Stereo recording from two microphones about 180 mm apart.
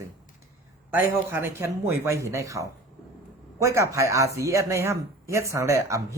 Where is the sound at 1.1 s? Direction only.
15° right (ahead or behind).